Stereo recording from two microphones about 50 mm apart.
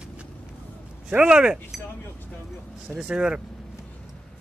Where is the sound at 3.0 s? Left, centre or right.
Centre.